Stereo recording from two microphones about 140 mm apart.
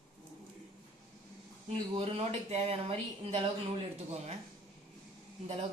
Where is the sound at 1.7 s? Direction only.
45° right (ahead or behind).